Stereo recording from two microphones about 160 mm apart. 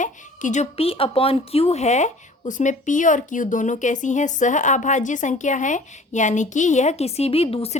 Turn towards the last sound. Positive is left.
turn(degrees=35)  # may be behind; listen again after turning